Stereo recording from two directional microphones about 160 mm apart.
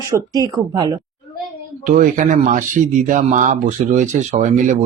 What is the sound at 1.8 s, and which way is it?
Speech, 50° right (ahead or behind).